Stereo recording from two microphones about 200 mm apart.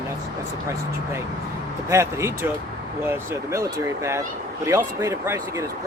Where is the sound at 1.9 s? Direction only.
15° right (ahead or behind).